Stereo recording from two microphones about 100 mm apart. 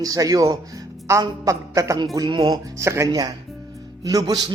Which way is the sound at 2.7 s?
30° right (ahead or behind).